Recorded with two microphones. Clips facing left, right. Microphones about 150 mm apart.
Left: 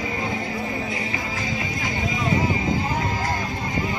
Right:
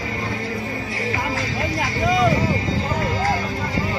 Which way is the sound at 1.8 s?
80° right.